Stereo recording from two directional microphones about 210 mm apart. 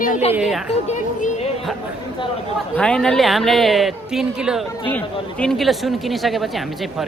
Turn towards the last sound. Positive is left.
turn(degrees=0)  # may be behind; listen again after turning